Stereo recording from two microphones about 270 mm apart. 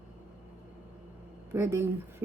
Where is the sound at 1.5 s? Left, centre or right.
Centre.